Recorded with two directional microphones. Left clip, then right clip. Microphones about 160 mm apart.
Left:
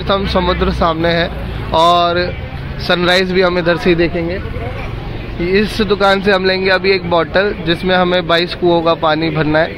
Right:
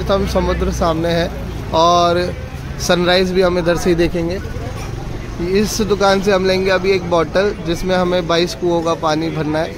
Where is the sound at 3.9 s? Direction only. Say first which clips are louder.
Left 2 dB; 35° right (ahead or behind).